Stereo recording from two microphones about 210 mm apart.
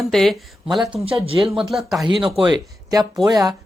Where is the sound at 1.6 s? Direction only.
Centre (ahead or behind).